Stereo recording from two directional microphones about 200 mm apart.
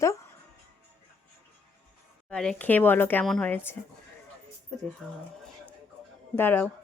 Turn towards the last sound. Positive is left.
turn(degrees=10)  # may be behind; listen again after turning